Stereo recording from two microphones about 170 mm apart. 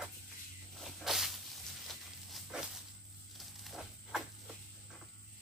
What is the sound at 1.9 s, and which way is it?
Dog, centre (ahead or behind).